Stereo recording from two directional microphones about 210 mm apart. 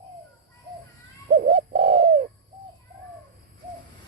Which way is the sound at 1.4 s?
35° right (ahead or behind).